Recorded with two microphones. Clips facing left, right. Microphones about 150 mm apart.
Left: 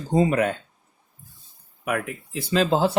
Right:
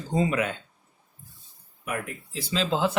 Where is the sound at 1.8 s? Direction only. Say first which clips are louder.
Left 6 dB; 60° left (ahead or behind); by 2.9 s 40° left (ahead or behind).